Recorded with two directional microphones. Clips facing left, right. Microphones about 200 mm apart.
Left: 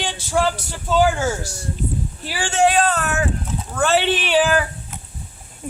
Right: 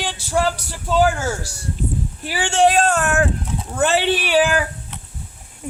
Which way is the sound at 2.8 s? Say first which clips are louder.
Right 2 dB; 50° right (ahead or behind).